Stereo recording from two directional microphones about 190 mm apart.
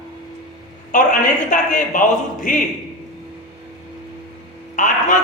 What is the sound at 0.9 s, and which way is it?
A woman's voice, 45° left (ahead or behind).